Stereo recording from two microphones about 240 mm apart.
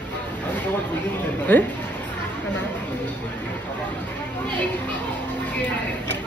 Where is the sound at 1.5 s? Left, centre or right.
Centre.